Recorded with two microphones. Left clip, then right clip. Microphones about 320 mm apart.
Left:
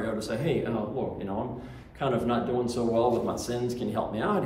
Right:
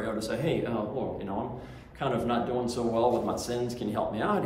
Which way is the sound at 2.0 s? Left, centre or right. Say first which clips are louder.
Left 1 dB; centre.